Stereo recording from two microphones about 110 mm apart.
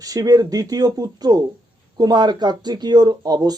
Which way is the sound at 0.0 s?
35° right (ahead or behind).